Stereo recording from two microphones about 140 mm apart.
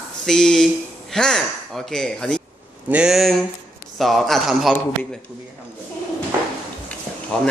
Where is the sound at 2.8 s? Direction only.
5° right (ahead or behind).